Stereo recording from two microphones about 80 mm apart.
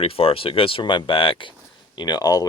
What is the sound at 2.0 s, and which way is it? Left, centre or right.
Speech, left.